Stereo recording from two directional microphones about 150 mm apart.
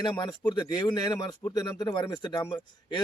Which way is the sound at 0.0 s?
30° left (ahead or behind).